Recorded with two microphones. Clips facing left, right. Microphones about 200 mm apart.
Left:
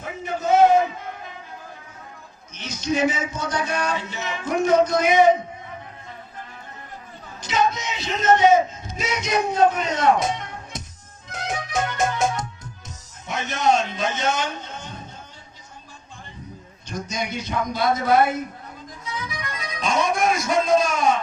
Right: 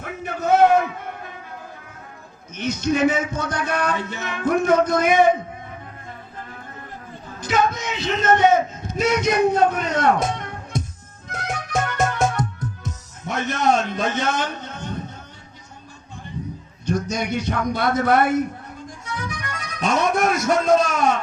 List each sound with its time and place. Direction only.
0.0 s a sound: 60° right (ahead or behind)
2.6 s speech: 55° right (ahead or behind)
7.4 s a man's voice: 55° right (ahead or behind)
11.3 s music: 55° right (ahead or behind)
16.9 s a man's voice: 60° right (ahead or behind)
19.8 s music: 60° right (ahead or behind)